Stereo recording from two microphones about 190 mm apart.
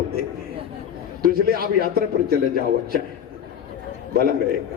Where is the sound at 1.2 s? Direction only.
50° right (ahead or behind).